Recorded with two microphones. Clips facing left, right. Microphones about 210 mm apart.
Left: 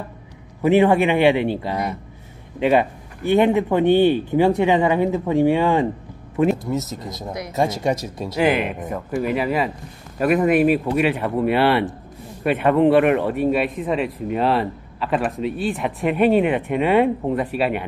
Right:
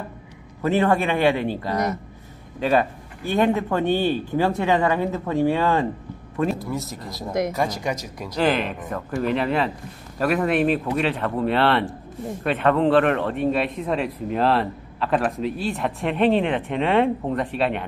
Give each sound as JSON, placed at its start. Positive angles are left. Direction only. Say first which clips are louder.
{"t": 0.6, "sound": "speech", "louder": "left 5 dB", "side_deg": 15}
{"t": 8.4, "sound": "speech", "louder": "left 2 dB", "side_deg": 10}